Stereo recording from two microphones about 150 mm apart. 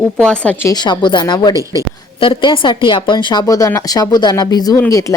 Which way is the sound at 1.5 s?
20° right (ahead or behind).